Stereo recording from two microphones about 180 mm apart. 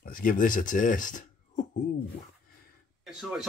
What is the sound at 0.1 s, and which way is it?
Speech, 50° left (ahead or behind).